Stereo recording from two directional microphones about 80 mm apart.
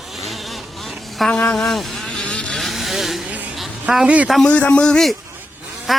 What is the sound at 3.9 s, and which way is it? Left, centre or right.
Speech, centre.